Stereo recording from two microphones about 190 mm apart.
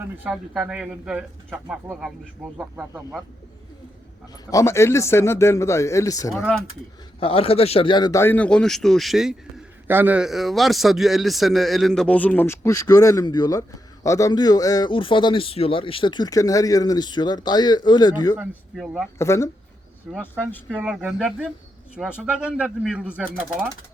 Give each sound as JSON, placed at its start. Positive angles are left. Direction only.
{"t": 0.0, "sound": "speech", "side_deg": -5}
{"t": 4.5, "sound": "speech", "side_deg": 15}
{"t": 6.3, "sound": "speech", "side_deg": 0}
{"t": 7.2, "sound": "a man's voice", "side_deg": 30}
{"t": 18.3, "sound": "speech", "side_deg": -5}
{"t": 19.2, "sound": "speech", "side_deg": 15}
{"t": 20.1, "sound": "speech", "side_deg": 0}